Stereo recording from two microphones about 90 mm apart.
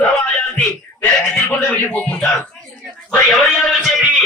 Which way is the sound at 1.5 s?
10° left (ahead or behind).